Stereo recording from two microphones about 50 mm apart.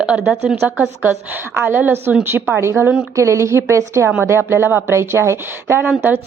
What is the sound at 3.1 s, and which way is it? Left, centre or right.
Speech, right.